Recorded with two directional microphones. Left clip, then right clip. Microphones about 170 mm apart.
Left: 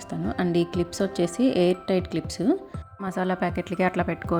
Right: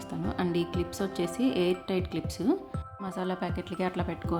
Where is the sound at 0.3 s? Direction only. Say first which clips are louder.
Left 6 dB; 25° left (ahead or behind).